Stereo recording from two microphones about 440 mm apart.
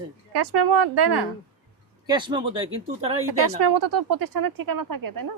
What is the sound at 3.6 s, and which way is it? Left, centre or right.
Speech, right.